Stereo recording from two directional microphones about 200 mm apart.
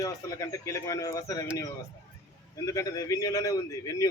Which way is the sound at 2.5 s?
15° left (ahead or behind).